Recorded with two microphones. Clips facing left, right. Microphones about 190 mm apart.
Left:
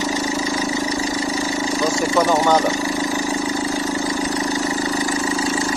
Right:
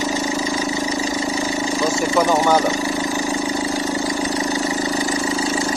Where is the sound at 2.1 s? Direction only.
10° right (ahead or behind).